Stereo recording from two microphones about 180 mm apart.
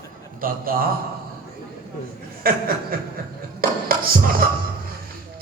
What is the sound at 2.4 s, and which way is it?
Speech, 55° right (ahead or behind).